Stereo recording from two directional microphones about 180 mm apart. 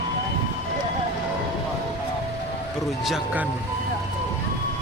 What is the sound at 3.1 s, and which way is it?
Speech, 5° right (ahead or behind).